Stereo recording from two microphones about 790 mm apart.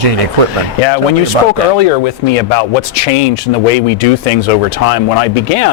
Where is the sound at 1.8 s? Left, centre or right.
Left.